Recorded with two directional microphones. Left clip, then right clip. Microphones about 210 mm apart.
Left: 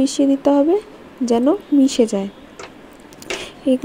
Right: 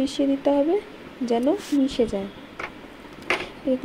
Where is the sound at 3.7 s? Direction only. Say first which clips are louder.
Left 7 dB; 40° left (ahead or behind).